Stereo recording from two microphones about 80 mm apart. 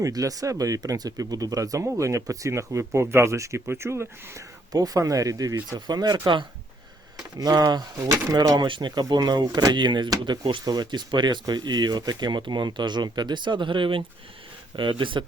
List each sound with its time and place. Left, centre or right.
0.0 s speech: right
4.7 s speech: right
7.3 s speech: right
7.9 s speech: right
8.5 s speech: right